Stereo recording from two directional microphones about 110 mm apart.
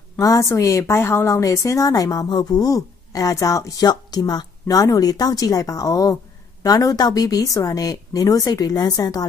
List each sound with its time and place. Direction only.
0.2 s a woman's voice: 30° left (ahead or behind)